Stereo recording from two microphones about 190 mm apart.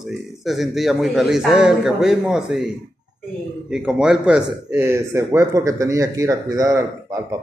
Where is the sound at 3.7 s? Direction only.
5° right (ahead or behind).